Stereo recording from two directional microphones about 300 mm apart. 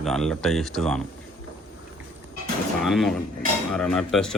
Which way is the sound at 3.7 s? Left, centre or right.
Centre.